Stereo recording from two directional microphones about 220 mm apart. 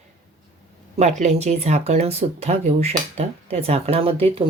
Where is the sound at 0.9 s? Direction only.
30° right (ahead or behind).